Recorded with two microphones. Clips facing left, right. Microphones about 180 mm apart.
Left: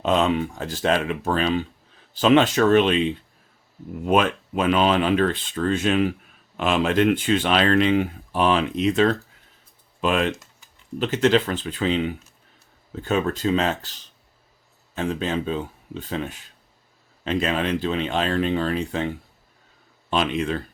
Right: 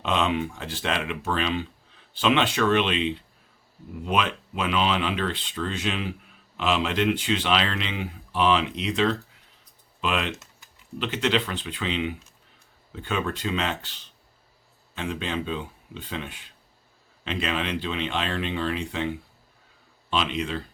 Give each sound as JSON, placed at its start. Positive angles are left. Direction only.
{"t": 0.0, "sound": "speech", "side_deg": 40}
{"t": 20.1, "sound": "speech", "side_deg": 50}